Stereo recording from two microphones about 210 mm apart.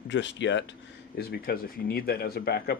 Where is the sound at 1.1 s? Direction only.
50° left (ahead or behind).